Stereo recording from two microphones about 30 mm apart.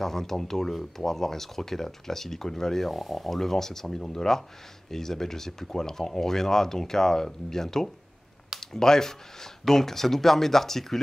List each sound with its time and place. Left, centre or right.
0.0 s speech: centre
2.9 s speech: centre